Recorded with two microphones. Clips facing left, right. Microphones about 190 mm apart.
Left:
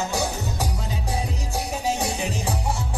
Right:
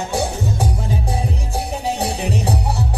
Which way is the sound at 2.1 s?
65° right (ahead or behind).